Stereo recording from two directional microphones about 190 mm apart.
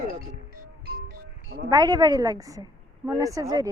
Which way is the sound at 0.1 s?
50° right (ahead or behind).